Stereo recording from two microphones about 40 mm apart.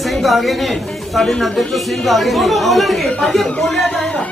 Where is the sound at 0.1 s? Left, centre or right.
Centre.